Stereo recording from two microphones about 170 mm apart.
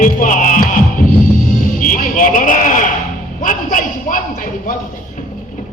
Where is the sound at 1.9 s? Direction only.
50° left (ahead or behind).